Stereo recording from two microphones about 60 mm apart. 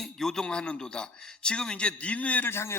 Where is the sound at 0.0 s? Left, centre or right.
Centre; by 2.5 s left.